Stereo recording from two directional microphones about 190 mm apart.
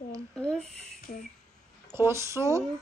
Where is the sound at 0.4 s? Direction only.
5° left (ahead or behind).